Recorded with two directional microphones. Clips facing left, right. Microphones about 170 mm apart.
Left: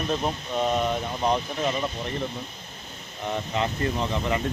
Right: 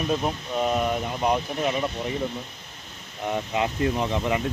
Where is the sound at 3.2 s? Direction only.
10° right (ahead or behind).